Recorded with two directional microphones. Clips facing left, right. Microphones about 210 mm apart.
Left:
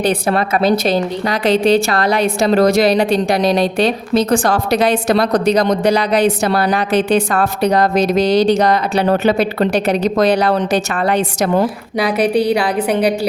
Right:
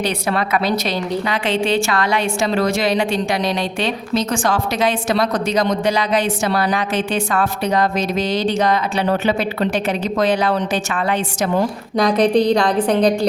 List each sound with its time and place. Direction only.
0.0 s a woman's voice: 50° left (ahead or behind)
4.7 s a woman's voice: 65° left (ahead or behind)
5.3 s a woman's voice: 35° left (ahead or behind)
6.5 s a woman's voice: 60° left (ahead or behind)
6.7 s a woman's voice: 35° left (ahead or behind)
11.9 s a woman's voice: 5° left (ahead or behind)